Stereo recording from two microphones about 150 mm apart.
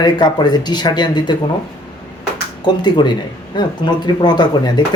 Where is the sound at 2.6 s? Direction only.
30° left (ahead or behind).